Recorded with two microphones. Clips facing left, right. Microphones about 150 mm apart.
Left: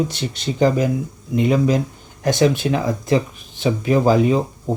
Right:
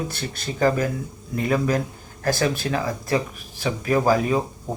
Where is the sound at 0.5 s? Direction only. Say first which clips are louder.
Left 4 dB; 15° left (ahead or behind).